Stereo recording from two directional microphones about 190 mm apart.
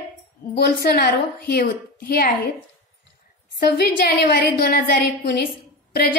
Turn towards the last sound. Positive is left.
turn(degrees=60)  # may be behind; listen again after turning